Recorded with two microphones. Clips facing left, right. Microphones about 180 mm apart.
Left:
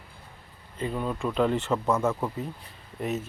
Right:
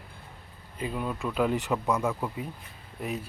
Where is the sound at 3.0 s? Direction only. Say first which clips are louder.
Left 4 dB; 10° right (ahead or behind).